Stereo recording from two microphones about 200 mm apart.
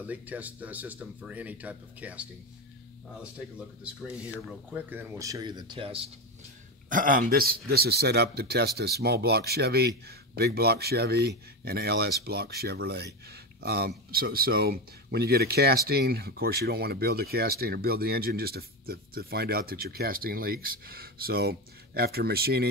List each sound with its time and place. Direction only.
0.0 s speech: 10° right (ahead or behind); by 6.0 s 25° right (ahead or behind)
6.9 s speech: 45° right (ahead or behind)